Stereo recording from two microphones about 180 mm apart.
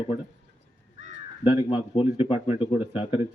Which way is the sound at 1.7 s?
30° left (ahead or behind).